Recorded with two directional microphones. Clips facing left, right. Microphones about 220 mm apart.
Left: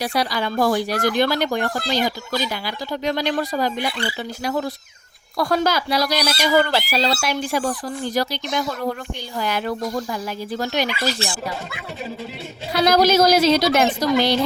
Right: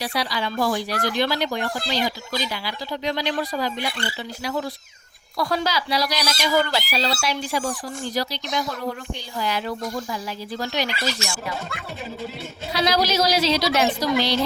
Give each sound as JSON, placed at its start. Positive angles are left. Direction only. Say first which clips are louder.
{"t": 0.0, "sound": "speech", "louder": "left 4 dB", "side_deg": 45}
{"t": 9.4, "sound": "speech", "louder": "left 3 dB", "side_deg": 50}
{"t": 11.2, "sound": "speech", "louder": "left 3 dB", "side_deg": 35}
{"t": 12.7, "sound": "speech", "louder": "left 6 dB", "side_deg": 50}